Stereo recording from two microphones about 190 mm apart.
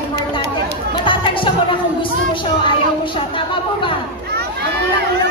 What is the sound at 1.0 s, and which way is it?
Music, 25° left (ahead or behind).